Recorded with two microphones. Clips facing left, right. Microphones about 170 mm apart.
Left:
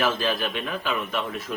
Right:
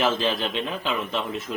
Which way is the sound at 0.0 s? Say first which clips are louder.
Right 1 dB; 25° right (ahead or behind).